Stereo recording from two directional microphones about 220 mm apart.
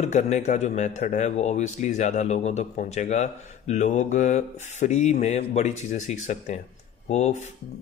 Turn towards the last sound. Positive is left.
turn(degrees=30)  # may be behind; listen again after turning